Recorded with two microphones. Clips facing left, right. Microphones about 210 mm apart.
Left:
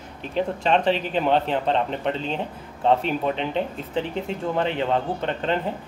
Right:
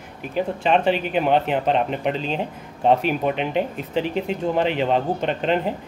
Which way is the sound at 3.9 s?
80° right.